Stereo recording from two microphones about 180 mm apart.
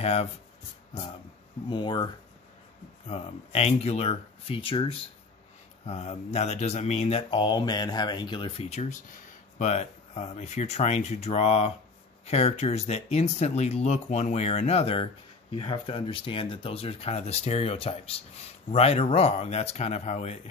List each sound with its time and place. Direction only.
0.0 s speech: 35° left (ahead or behind)
1.7 s speech: 25° left (ahead or behind)
3.1 s speech: 35° left (ahead or behind)